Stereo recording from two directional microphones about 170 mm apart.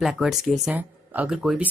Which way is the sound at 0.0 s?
Centre (ahead or behind).